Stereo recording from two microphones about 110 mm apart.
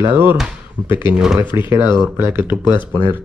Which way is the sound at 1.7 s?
25° right (ahead or behind).